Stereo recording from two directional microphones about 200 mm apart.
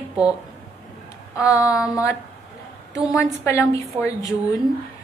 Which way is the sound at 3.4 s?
15° left (ahead or behind).